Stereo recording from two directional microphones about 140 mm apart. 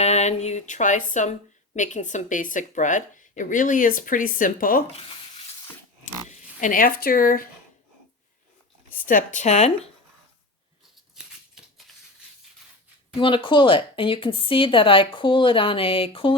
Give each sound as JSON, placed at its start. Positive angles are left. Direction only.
{"t": 0.0, "sound": "speech", "side_deg": 50}
{"t": 4.9, "sound": "speech", "side_deg": 45}
{"t": 6.2, "sound": "speech", "side_deg": 70}
{"t": 8.9, "sound": "speech", "side_deg": 75}
{"t": 11.1, "sound": "scissors", "side_deg": -5}
{"t": 13.1, "sound": "a woman's voice", "side_deg": 35}